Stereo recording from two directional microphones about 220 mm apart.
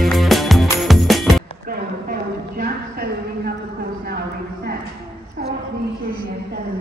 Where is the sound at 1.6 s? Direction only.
40° right (ahead or behind).